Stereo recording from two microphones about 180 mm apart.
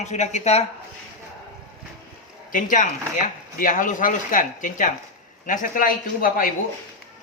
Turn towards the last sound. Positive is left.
turn(degrees=50)  # may be behind; listen again after turning